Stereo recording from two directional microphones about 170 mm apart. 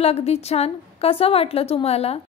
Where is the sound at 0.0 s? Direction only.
35° left (ahead or behind).